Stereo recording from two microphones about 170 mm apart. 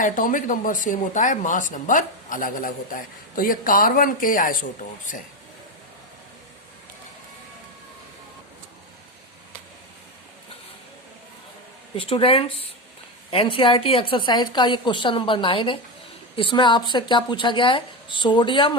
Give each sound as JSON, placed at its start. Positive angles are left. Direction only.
{"t": 0.0, "sound": "speech", "side_deg": 50}
{"t": 11.9, "sound": "a woman's voice", "side_deg": 30}